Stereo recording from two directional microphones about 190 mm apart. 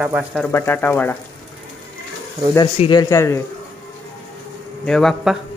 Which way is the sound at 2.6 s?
25° left (ahead or behind).